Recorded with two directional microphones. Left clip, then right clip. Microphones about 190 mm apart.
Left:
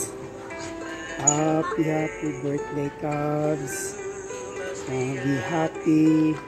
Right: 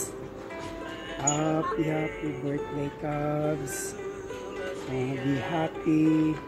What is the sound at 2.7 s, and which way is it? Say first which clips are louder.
Music: left 4 dB; 5° right (ahead or behind).